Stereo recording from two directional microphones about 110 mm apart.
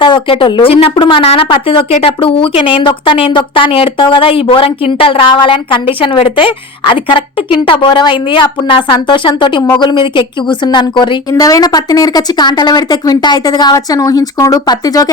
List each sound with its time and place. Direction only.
0.0 s a woman's voice: 50° left (ahead or behind)